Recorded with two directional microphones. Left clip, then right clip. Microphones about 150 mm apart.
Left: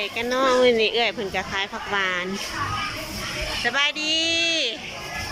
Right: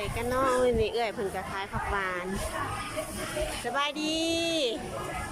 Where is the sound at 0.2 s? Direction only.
5° right (ahead or behind).